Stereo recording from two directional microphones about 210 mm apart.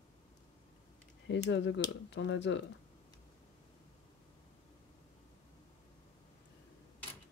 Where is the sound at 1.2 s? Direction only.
55° left (ahead or behind).